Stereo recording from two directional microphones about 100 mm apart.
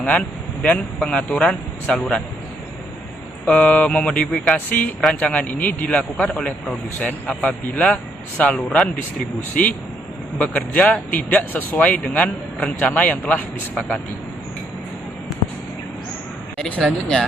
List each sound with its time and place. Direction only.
0.1 s a man's voice: 10° left (ahead or behind)
3.4 s a man's voice: 10° left (ahead or behind)
16.6 s a man's voice: 15° left (ahead or behind)